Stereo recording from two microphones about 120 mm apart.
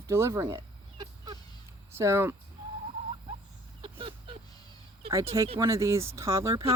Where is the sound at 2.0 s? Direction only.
20° right (ahead or behind).